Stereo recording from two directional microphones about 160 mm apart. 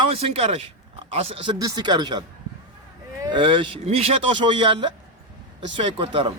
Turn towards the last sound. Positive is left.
turn(degrees=-35)  # may be behind; listen again after turning